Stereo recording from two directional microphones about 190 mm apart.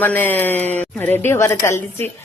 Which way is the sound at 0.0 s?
10° left (ahead or behind).